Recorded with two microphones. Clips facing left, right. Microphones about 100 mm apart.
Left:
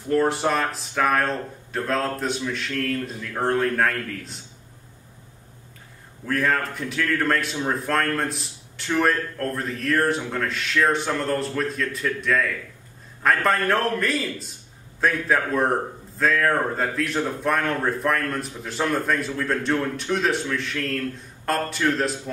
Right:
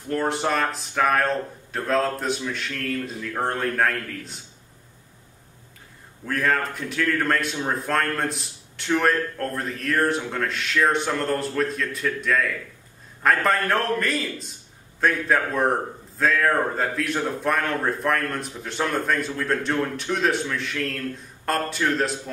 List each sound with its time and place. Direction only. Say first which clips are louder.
0.1 s a man's voice: left 3 dB; centre (ahead or behind)
6.2 s a man's voice: even; centre (ahead or behind)